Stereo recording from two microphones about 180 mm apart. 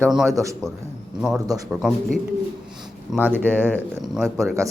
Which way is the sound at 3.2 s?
10° right (ahead or behind).